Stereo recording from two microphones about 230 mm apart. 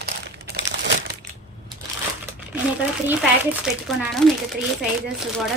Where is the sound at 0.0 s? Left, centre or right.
Right.